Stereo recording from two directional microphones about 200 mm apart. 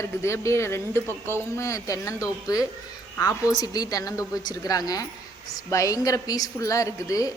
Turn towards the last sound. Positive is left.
turn(degrees=15)  # may be behind; listen again after turning